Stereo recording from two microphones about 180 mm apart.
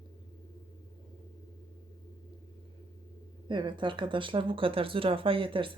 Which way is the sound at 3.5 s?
25° right (ahead or behind).